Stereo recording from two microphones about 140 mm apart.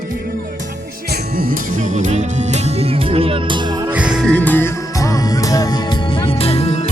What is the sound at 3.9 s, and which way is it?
Music, 10° right (ahead or behind).